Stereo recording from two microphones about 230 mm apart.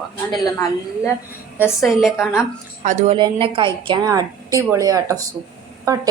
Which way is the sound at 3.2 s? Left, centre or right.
Right.